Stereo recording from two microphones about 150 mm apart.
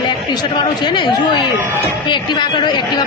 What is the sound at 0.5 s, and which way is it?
Speech, 30° left (ahead or behind).